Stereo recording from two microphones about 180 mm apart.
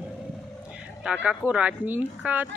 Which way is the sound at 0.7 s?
5° right (ahead or behind).